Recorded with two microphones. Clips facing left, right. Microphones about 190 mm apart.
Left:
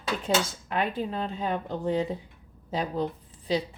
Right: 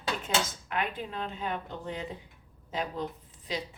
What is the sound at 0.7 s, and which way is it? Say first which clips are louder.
Speech: left 6 dB; 35° left (ahead or behind).